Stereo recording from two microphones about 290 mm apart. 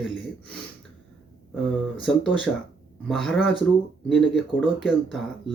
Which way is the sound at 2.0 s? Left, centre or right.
Centre.